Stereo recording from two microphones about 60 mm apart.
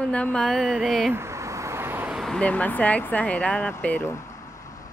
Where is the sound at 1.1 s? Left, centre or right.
Right.